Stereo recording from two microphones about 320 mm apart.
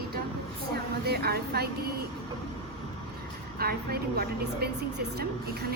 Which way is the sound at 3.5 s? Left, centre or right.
Right.